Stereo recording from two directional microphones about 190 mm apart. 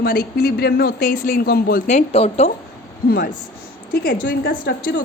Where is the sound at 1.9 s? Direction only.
35° left (ahead or behind).